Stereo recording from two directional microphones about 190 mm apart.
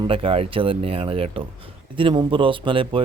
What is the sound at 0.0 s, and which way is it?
Speech, 30° right (ahead or behind).